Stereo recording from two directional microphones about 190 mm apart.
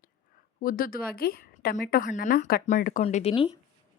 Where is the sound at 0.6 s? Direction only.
50° left (ahead or behind); by 3.5 s 30° left (ahead or behind).